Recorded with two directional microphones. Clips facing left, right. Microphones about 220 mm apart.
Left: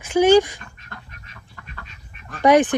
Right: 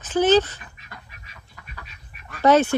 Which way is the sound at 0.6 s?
5° right (ahead or behind).